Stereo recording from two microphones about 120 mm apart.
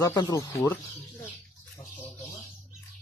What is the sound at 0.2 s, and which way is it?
Speech, 35° left (ahead or behind).